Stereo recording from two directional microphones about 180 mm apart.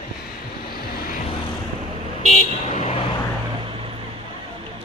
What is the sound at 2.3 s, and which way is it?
Vehicle, 40° left (ahead or behind).